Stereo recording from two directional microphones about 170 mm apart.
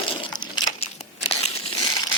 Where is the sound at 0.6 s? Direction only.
40° left (ahead or behind).